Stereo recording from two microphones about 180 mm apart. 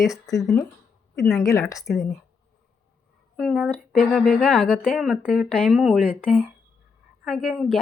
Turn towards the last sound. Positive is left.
turn(degrees=0)  # may be behind; listen again after turning